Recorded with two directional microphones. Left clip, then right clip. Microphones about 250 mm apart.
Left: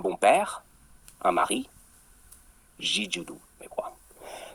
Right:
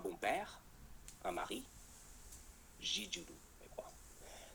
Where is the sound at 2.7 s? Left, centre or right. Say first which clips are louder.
Left 13 dB; left.